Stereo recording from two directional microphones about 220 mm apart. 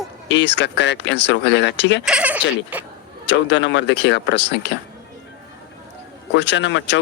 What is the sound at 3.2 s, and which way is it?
Speech, 55° left (ahead or behind).